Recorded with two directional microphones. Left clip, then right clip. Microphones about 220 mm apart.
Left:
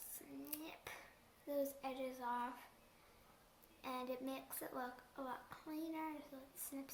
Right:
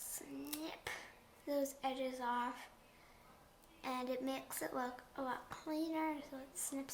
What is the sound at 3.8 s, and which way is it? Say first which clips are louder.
Speech: right 5 dB; 15° right (ahead or behind).